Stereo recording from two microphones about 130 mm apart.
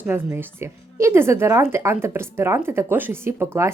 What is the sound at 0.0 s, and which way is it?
A woman's voice, 15° right (ahead or behind).